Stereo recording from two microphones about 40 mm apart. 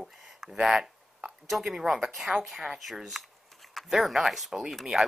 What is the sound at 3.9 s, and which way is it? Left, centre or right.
Speech, centre.